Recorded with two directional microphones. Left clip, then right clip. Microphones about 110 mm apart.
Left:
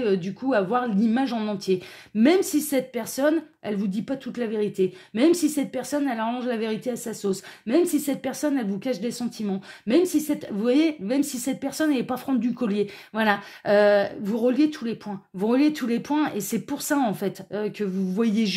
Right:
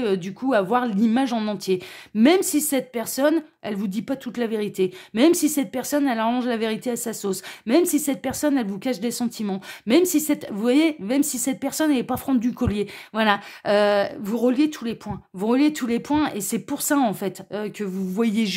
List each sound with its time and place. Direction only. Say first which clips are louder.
0.0 s a woman's voice: right 1 dB; 40° right (ahead or behind)
1.7 s a woman's voice: right 1 dB; 30° right (ahead or behind)
3.7 s a woman's voice: right 1 dB; 40° right (ahead or behind)
12.4 s speech: right 1 dB; 40° right (ahead or behind)
14.2 s speech: right 1 dB; 45° right (ahead or behind)
15.0 s a woman's voice: right 1 dB; 30° right (ahead or behind)